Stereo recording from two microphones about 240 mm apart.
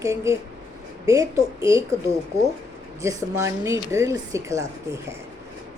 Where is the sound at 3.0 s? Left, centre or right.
Centre.